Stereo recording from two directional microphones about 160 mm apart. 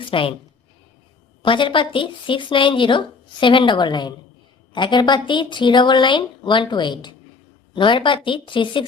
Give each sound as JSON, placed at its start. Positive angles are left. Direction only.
{"t": 0.0, "sound": "speech", "side_deg": 35}
{"t": 1.4, "sound": "speech", "side_deg": 30}